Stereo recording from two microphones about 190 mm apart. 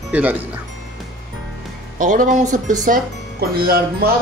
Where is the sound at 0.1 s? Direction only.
10° right (ahead or behind).